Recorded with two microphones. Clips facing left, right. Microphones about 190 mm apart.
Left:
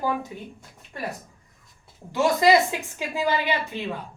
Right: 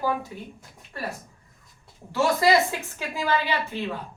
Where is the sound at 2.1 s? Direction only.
15° left (ahead or behind).